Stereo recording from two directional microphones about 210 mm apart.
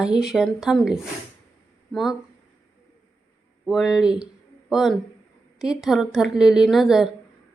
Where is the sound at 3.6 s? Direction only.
Centre (ahead or behind).